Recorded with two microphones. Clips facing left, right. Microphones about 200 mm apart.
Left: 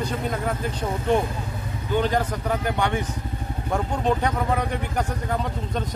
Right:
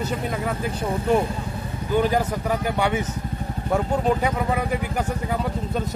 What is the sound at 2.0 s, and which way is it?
Speech, 10° right (ahead or behind).